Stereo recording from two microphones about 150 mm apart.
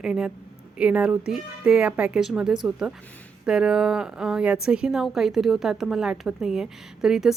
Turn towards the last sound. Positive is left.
turn(degrees=-5)  # may be behind; listen again after turning